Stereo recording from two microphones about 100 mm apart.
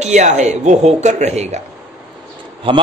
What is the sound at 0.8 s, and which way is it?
Speech, 90° right.